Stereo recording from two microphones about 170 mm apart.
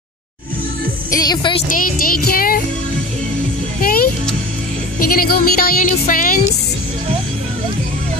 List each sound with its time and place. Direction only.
1.1 s speech: 25° left (ahead or behind)
1.7 s speech: 55° left (ahead or behind)
3.8 s music: 60° left (ahead or behind)
4.9 s speech: 60° left (ahead or behind)